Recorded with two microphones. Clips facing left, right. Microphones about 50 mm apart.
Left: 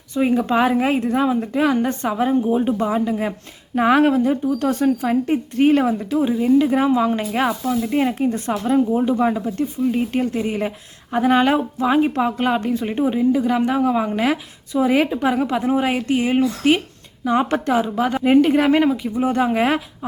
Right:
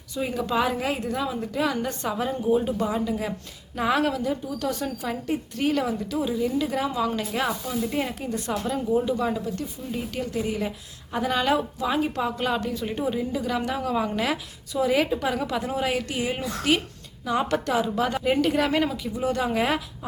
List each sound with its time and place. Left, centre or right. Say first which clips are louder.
0.2 s a woman's voice: left 8 dB; left